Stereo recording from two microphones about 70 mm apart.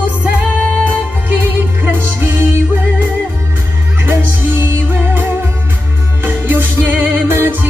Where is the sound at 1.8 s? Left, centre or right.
Right.